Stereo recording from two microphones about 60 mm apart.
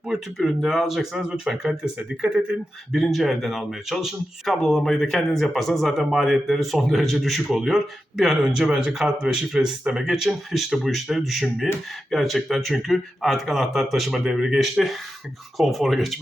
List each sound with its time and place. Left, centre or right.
0.1 s speech: centre
4.4 s speech: centre